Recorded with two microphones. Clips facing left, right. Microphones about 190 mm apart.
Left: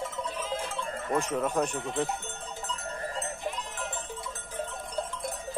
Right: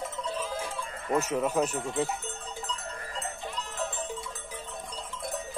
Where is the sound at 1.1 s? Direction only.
5° right (ahead or behind).